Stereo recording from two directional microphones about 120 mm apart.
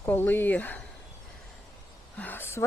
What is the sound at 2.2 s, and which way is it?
Speech, 15° left (ahead or behind).